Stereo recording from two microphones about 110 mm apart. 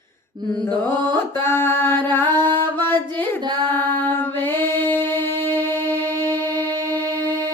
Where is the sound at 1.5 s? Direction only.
20° left (ahead or behind).